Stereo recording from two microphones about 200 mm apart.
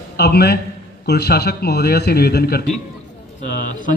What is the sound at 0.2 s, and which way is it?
A man's voice, 55° left (ahead or behind).